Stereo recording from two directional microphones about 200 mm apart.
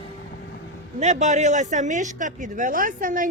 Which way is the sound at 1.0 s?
35° right (ahead or behind).